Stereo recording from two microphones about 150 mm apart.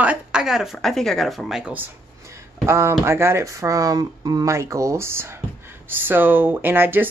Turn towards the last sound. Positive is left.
turn(degrees=-15)  # may be behind; listen again after turning